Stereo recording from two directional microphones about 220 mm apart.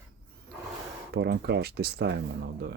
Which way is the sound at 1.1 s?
45° right (ahead or behind).